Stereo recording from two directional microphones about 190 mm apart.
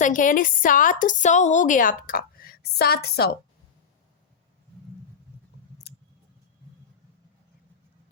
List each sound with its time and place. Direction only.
0.0 s a woman's voice: 45° left (ahead or behind)